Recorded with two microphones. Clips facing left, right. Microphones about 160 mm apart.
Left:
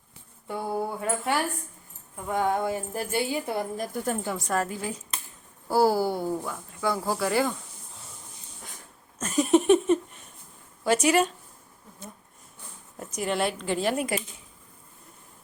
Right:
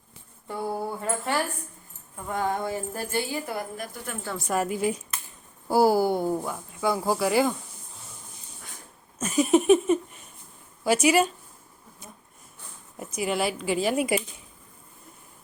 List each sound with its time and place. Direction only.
0.4 s speech: 5° left (ahead or behind)
2.3 s music: 15° left (ahead or behind)
3.8 s speech: 40° left (ahead or behind)
4.4 s speech: 10° right (ahead or behind)
9.1 s speech: 5° right (ahead or behind)
13.0 s speech: 5° right (ahead or behind)